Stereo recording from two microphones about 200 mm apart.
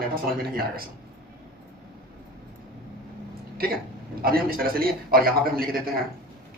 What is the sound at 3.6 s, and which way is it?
A man's voice, 50° right (ahead or behind).